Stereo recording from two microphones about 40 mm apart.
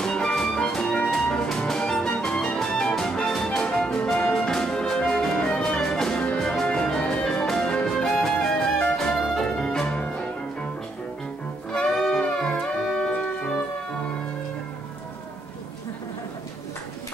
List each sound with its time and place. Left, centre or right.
0.0 s music: centre
11.9 s music: centre
12.2 s music: centre